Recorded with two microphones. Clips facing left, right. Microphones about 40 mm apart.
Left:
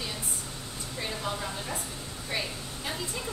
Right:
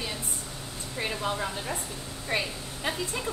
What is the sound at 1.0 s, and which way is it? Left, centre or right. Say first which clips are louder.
Speech: right 4 dB; right.